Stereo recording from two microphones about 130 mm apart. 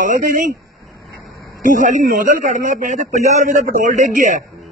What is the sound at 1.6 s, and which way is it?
Speech, 85° right.